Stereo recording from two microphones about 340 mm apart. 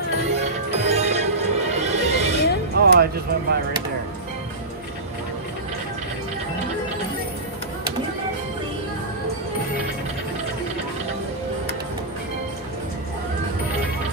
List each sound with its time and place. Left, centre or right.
0.3 s music: centre